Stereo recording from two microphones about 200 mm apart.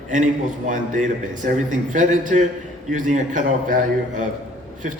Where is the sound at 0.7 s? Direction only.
40° right (ahead or behind).